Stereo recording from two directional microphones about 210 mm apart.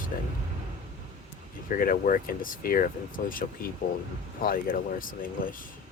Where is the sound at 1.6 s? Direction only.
40° left (ahead or behind).